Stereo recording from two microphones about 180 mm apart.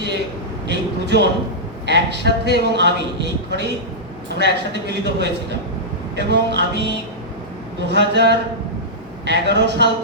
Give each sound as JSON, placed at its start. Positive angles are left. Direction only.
{"t": 0.7, "sound": "speech", "side_deg": -70}